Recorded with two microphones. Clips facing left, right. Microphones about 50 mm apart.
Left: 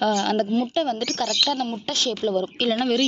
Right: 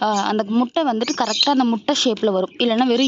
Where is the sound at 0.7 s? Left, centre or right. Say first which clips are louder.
Right 4 dB; centre.